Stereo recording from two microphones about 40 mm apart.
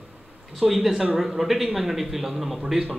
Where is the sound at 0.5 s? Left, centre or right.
Centre.